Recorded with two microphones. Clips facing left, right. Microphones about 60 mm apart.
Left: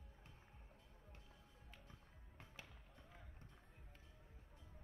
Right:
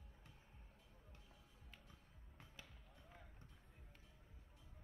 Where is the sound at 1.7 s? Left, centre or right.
Left.